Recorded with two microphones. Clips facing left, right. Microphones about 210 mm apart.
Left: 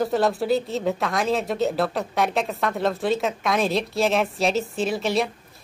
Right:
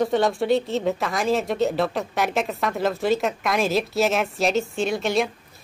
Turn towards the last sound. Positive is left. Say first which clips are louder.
# right 1 dB
turn(degrees=0)  # may be behind; listen again after turning